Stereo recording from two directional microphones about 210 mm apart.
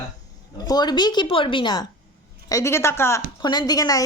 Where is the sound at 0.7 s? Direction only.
20° left (ahead or behind).